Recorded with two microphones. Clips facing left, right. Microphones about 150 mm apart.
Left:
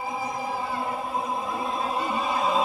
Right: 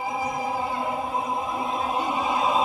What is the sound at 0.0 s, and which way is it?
Choir, 20° right (ahead or behind).